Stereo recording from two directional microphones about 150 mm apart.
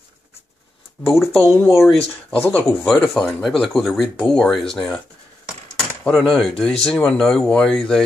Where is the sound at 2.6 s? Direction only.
15° left (ahead or behind).